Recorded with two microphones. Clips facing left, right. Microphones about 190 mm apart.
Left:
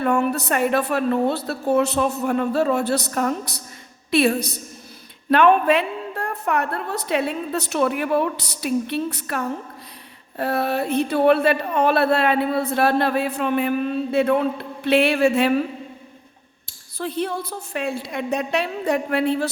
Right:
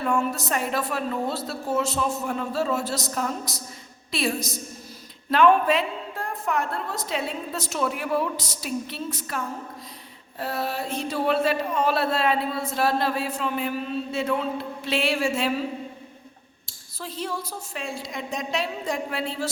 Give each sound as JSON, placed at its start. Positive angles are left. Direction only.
{"t": 0.0, "sound": "speech", "side_deg": 65}
{"t": 17.0, "sound": "speech", "side_deg": 60}